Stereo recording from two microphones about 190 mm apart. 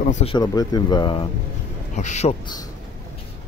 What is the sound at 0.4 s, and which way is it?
Speech, 20° left (ahead or behind).